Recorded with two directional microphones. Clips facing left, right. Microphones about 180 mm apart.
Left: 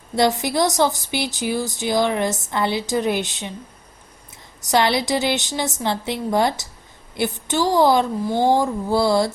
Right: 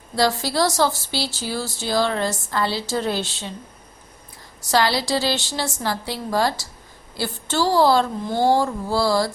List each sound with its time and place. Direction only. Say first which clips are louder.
0.2 s speech: left 2 dB; 20° left (ahead or behind)
4.6 s a woman's voice: left 2 dB; 20° left (ahead or behind)